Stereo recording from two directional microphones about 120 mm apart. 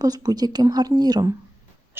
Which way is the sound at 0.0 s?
30° right (ahead or behind).